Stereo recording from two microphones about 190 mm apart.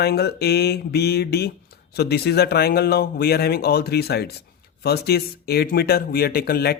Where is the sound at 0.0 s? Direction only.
60° left (ahead or behind).